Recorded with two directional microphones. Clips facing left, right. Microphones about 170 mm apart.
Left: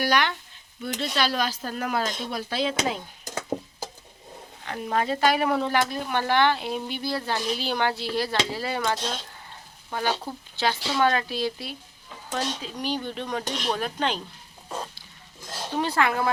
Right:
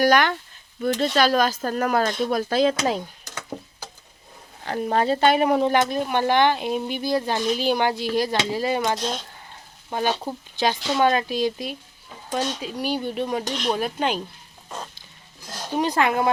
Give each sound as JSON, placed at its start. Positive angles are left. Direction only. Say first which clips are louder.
{"t": 0.0, "sound": "speech", "louder": "right 6 dB", "side_deg": -45}
{"t": 4.6, "sound": "a woman's voice", "louder": "right 5 dB", "side_deg": -35}
{"t": 15.4, "sound": "a sound", "louder": "even", "side_deg": 5}
{"t": 15.7, "sound": "a woman's voice", "louder": "right 3 dB", "side_deg": -15}